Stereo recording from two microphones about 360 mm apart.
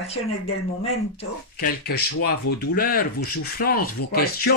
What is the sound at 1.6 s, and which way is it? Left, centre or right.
Speech, left.